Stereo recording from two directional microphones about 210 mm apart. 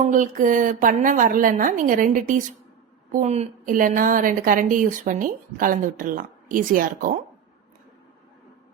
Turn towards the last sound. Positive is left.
turn(degrees=-40)  # may be behind; listen again after turning